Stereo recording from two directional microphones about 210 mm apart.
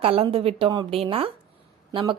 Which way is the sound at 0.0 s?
25° right (ahead or behind).